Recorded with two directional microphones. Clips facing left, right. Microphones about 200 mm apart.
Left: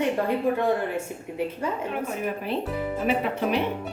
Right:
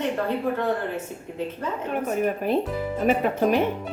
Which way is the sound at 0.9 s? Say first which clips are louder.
Left 1 dB; 10° left (ahead or behind).